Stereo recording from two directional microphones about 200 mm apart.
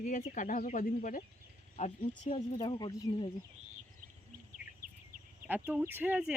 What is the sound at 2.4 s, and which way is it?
Speech, 20° left (ahead or behind).